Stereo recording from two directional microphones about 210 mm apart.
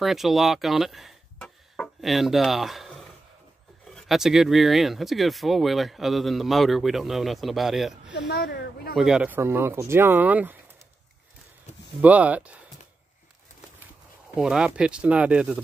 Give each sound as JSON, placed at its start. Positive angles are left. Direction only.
{"t": 0.0, "sound": "speech", "side_deg": 0}
{"t": 8.1, "sound": "speech", "side_deg": 55}
{"t": 8.9, "sound": "speech", "side_deg": -5}
{"t": 11.7, "sound": "a sound", "side_deg": 30}
{"t": 12.0, "sound": "speech", "side_deg": -5}
{"t": 14.3, "sound": "speech", "side_deg": -5}